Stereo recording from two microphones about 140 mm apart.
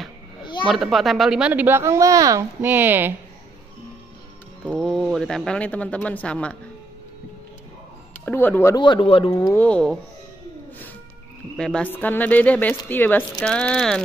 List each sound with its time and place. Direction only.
0.4 s a sound: 35° left (ahead or behind)
0.7 s speech: centre (ahead or behind)
4.6 s speech: centre (ahead or behind)
8.3 s speech: 15° left (ahead or behind)
8.7 s speech: 35° left (ahead or behind)
9.5 s speech: 10° left (ahead or behind)
11.5 s speech: 5° left (ahead or behind)